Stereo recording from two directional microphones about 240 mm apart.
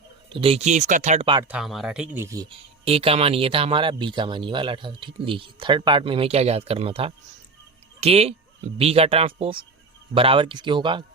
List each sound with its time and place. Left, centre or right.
0.3 s speech: right
1.5 s speech: centre